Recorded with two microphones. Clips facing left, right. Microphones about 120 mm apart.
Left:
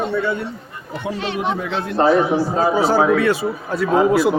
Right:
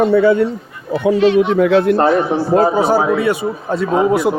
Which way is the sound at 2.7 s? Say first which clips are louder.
Right 1 dB; 15° right (ahead or behind).